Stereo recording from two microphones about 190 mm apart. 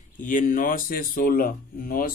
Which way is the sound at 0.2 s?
45° left (ahead or behind).